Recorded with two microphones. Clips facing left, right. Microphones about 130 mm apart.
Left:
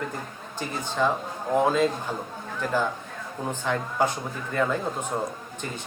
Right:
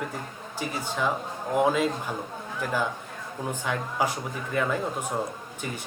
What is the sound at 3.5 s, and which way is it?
Speech, 10° right (ahead or behind).